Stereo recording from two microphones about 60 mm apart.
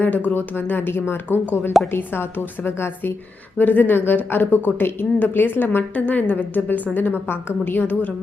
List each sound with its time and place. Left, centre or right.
0.0 s speech: left
1.7 s a woman's voice: centre
3.6 s speech: left